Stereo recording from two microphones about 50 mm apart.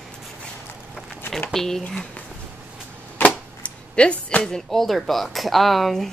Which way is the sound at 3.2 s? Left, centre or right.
Left.